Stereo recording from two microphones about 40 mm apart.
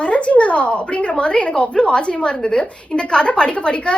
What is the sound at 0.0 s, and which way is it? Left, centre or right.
A woman's voice, left.